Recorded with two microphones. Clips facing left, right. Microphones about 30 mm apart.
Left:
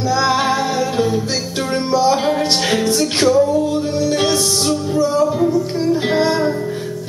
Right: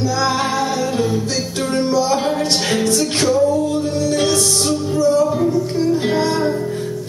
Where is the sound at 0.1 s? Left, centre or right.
Centre.